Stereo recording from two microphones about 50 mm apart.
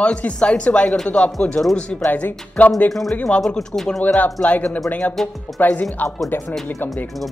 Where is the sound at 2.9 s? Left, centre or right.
Centre.